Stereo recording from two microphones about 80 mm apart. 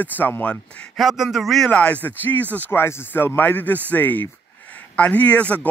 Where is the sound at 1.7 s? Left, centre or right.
Centre.